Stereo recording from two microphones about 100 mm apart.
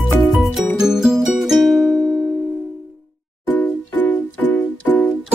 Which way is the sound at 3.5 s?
20° left (ahead or behind).